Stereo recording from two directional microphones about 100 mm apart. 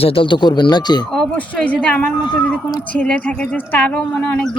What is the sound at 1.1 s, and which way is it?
A woman's voice, 5° left (ahead or behind).